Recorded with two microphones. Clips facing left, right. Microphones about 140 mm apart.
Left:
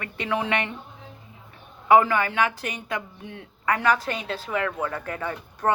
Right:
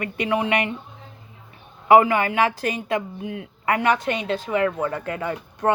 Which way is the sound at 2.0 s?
20° right (ahead or behind).